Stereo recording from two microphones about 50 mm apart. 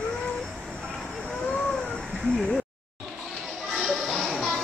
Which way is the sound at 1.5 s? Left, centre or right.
Centre.